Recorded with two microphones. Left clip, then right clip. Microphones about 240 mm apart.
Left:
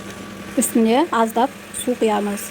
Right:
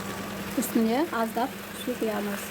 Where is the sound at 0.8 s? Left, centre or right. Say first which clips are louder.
Left 12 dB; centre.